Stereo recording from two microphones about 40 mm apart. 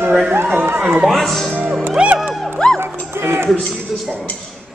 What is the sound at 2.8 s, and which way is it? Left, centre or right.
Music, right.